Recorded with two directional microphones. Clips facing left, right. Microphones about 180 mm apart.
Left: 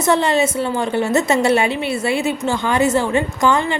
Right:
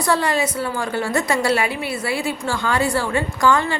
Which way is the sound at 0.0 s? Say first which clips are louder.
Left 4 dB; 25° left (ahead or behind).